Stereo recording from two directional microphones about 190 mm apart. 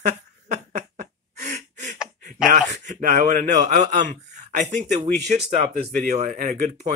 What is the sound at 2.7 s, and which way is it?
Speech, 40° right (ahead or behind).